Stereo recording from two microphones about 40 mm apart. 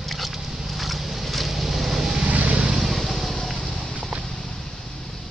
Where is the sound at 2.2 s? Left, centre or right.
Right.